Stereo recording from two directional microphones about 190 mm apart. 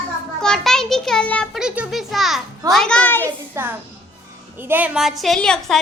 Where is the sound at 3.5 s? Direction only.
10° right (ahead or behind).